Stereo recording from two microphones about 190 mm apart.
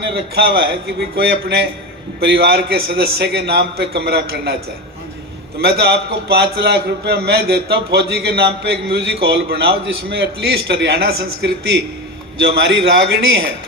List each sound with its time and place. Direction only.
0.1 s a man's voice: 60° right (ahead or behind)
5.5 s a man's voice: 55° right (ahead or behind)